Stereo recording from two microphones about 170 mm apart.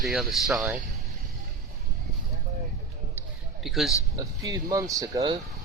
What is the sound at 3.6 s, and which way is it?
Speech, centre (ahead or behind).